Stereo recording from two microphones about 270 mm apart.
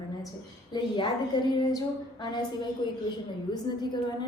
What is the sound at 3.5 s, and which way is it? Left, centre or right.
Speech, centre.